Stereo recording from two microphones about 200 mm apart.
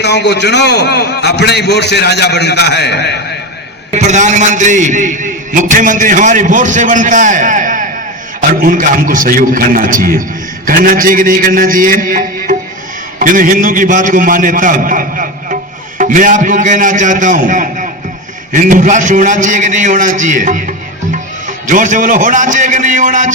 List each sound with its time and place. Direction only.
0.0 s a man's voice: 60° left (ahead or behind)
3.9 s a man's voice: 35° right (ahead or behind)